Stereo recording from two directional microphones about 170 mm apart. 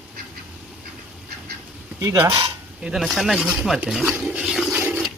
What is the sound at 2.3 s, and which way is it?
Speech, 30° right (ahead or behind).